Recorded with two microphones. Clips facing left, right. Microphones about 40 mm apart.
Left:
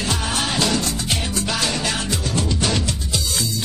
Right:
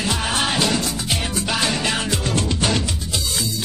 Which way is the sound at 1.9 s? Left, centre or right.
Right.